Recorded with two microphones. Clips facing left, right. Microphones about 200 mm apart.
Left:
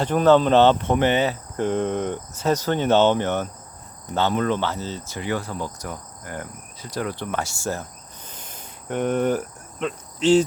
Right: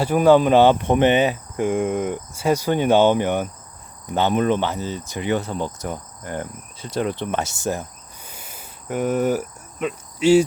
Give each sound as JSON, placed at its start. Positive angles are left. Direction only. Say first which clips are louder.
{"t": 0.0, "sound": "speech", "louder": "right 2 dB", "side_deg": -10}
{"t": 8.3, "sound": "cricket", "louder": "even", "side_deg": -10}